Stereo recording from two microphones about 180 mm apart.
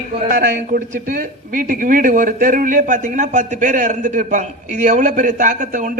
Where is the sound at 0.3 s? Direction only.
50° right (ahead or behind).